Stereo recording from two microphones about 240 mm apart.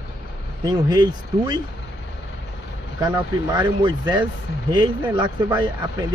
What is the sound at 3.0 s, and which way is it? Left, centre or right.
Speech, centre.